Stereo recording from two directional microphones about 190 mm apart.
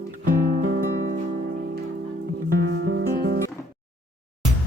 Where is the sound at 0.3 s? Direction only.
50° right (ahead or behind).